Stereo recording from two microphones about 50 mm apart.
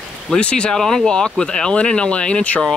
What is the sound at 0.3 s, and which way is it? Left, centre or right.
Speech, left.